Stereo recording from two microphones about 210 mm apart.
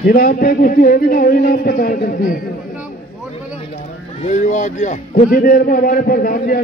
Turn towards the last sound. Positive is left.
turn(degrees=45)  # may be behind; listen again after turning